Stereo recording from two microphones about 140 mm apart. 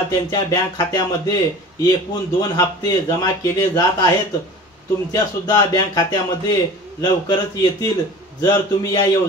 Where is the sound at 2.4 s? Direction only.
25° left (ahead or behind).